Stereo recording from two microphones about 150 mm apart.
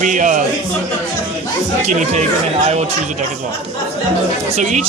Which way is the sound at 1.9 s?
55° right (ahead or behind).